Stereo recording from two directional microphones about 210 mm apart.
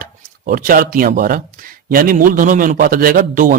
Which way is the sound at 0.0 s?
40° right (ahead or behind).